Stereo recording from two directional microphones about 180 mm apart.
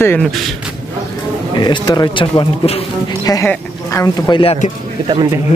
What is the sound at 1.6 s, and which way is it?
Speech, 25° left (ahead or behind).